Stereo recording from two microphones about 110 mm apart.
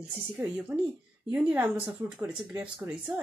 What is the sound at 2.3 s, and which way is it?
Speech, 10° right (ahead or behind).